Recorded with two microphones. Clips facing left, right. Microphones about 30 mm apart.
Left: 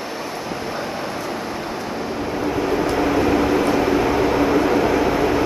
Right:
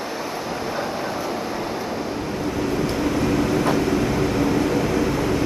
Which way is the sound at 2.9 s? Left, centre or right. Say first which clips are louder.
Left 5 dB; centre.